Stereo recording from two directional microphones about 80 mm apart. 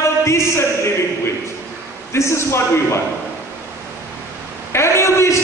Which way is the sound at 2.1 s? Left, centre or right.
Left.